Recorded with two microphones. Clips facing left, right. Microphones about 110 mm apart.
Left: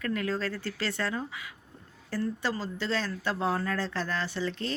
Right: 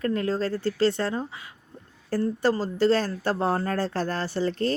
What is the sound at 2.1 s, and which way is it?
Speech, 45° right (ahead or behind).